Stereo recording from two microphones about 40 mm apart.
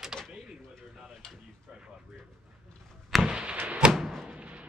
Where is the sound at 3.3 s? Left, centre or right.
Right.